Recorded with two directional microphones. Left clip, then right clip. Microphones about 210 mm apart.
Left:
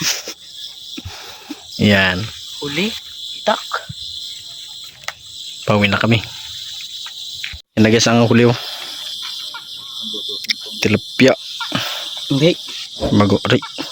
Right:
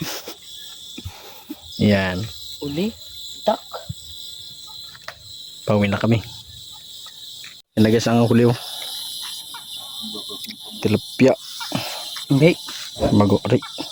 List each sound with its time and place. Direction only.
0.0 s cricket: 20° right (ahead or behind)
1.5 s cricket: centre (ahead or behind)
3.5 s speech: 20° right (ahead or behind)
5.6 s speech: 5° left (ahead or behind)
7.8 s speech: 5° left (ahead or behind)
10.4 s cricket: centre (ahead or behind)
12.3 s cricket: 45° right (ahead or behind)
13.0 s speech: centre (ahead or behind)